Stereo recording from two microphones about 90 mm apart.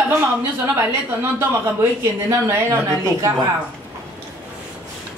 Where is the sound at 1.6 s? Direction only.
30° right (ahead or behind).